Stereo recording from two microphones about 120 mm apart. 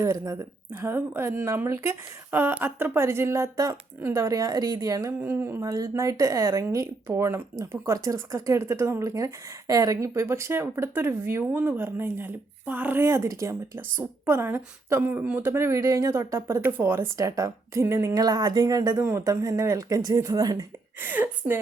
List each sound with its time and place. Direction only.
0.0 s speech: 25° right (ahead or behind)
5.2 s speech: 15° right (ahead or behind)
21.0 s a woman's voice: 15° right (ahead or behind)